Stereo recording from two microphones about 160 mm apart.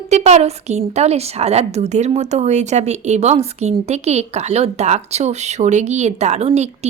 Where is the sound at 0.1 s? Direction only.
45° right (ahead or behind).